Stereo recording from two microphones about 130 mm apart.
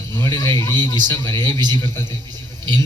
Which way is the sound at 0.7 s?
35° right (ahead or behind).